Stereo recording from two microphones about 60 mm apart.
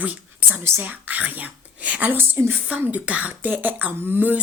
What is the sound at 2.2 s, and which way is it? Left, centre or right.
Speech, right.